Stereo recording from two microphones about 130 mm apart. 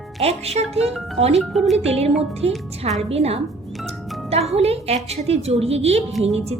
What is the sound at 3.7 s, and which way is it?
Music, centre (ahead or behind).